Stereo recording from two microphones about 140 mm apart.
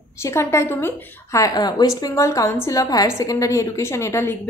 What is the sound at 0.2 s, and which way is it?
A woman's voice, 20° left (ahead or behind).